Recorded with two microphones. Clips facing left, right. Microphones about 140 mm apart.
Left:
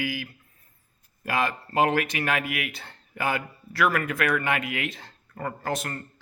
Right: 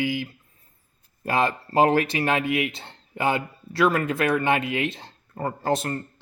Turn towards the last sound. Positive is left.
turn(degrees=-30)  # may be behind; listen again after turning